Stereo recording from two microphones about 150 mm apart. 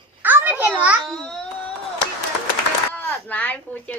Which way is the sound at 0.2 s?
10° right (ahead or behind).